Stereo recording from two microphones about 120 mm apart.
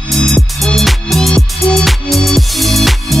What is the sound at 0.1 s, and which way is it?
Music, centre (ahead or behind).